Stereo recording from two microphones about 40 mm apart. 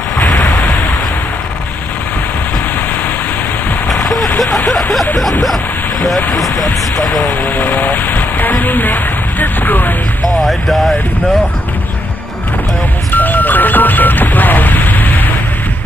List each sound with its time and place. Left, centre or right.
0.2 s a sound: left
3.9 s vehicle: centre
5.1 s speech: centre
7.4 s speech: left
10.3 s speech: centre
13.1 s a sound: left